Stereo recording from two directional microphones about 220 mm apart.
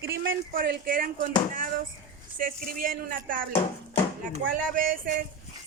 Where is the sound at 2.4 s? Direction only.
40° right (ahead or behind).